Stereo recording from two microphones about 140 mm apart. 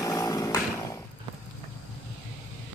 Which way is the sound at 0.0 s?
25° left (ahead or behind).